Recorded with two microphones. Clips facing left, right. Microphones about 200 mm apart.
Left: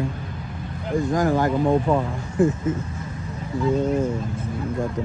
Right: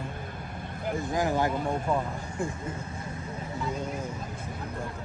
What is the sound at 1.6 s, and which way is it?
Speech, 90° left.